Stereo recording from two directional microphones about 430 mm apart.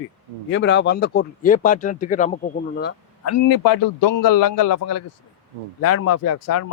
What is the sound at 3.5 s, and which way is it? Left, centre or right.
A man's voice, left.